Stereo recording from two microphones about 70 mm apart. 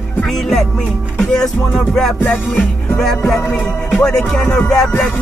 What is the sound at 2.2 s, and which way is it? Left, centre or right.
Music, left.